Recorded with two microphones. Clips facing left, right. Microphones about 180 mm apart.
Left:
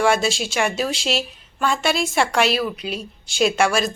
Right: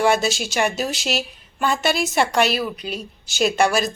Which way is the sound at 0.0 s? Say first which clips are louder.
Even; centre (ahead or behind).